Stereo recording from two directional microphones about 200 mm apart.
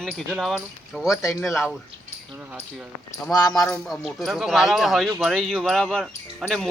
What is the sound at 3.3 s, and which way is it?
Speech, 20° left (ahead or behind).